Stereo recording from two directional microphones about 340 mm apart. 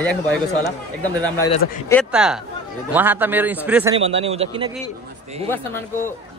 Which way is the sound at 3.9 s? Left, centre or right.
Centre.